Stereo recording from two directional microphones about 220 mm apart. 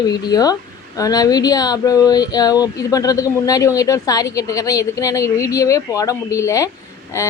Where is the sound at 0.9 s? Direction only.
15° left (ahead or behind).